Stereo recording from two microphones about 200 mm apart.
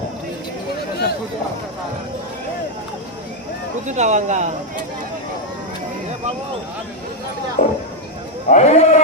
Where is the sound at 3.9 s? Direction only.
35° right (ahead or behind).